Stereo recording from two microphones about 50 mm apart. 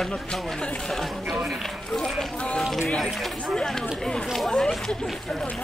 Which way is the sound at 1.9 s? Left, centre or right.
Centre.